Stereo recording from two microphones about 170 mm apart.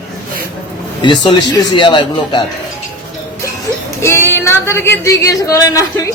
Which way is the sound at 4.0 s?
15° left (ahead or behind).